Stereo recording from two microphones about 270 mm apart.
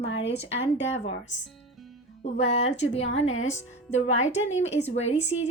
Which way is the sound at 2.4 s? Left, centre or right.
Left.